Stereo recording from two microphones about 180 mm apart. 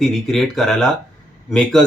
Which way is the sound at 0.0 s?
Centre (ahead or behind).